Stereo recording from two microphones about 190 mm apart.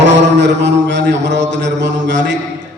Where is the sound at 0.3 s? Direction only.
65° right (ahead or behind).